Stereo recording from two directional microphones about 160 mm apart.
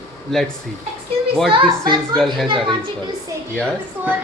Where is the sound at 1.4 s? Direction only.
30° right (ahead or behind).